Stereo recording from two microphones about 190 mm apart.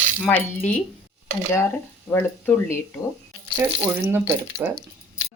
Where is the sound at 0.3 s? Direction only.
10° left (ahead or behind).